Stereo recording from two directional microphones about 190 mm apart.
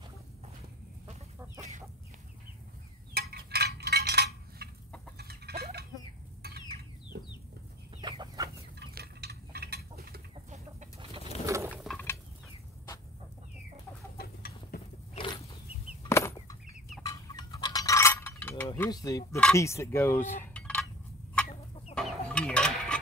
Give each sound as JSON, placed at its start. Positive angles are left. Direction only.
{"t": 3.2, "sound": "a sound", "side_deg": -55}
{"t": 5.1, "sound": "chicken", "side_deg": -55}
{"t": 8.0, "sound": "chicken", "side_deg": -25}
{"t": 8.7, "sound": "chicken", "side_deg": -55}
{"t": 11.4, "sound": "a sound", "side_deg": -15}
{"t": 11.8, "sound": "mechanisms", "side_deg": 5}
{"t": 14.1, "sound": "chicken", "side_deg": 55}
{"t": 15.1, "sound": "a sound", "side_deg": 25}
{"t": 16.0, "sound": "fowl", "side_deg": 15}
{"t": 17.0, "sound": "mechanisms", "side_deg": 20}
{"t": 18.8, "sound": "speech", "side_deg": 20}
{"t": 21.9, "sound": "chicken", "side_deg": 5}